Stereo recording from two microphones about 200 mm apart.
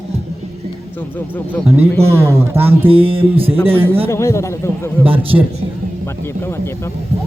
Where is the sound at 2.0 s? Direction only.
15° right (ahead or behind).